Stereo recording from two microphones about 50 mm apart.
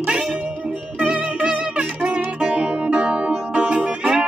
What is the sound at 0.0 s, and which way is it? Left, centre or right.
Music, centre.